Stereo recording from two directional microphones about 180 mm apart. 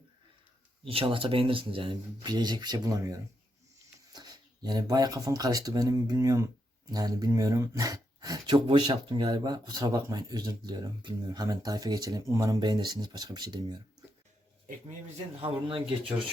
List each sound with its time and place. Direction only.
0.9 s speech: 30° right (ahead or behind)
15.4 s speech: 30° right (ahead or behind)